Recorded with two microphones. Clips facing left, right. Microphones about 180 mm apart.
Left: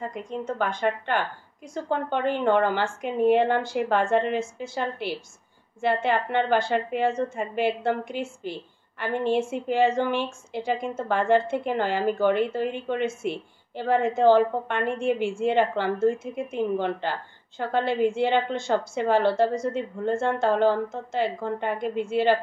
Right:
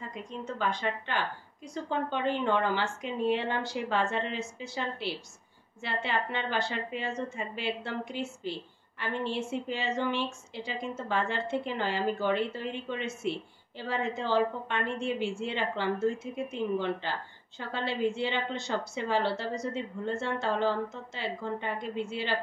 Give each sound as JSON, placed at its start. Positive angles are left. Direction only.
{"t": 0.0, "sound": "a woman's voice", "side_deg": 50}